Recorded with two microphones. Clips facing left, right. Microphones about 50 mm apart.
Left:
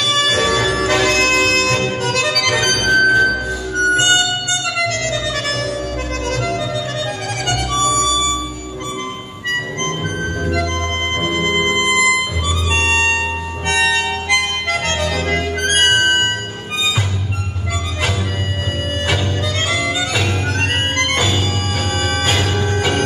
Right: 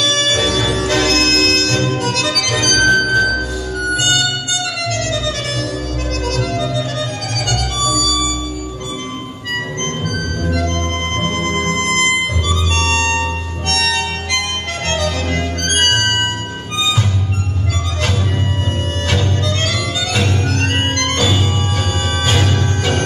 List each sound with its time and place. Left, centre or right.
0.2 s music: left
3.9 s music: left
6.2 s music: left
7.4 s harmonica: left
10.4 s organ: left
11.1 s music: centre
12.7 s harmonica: centre
19.0 s music: centre
20.9 s organ: centre
22.3 s music: centre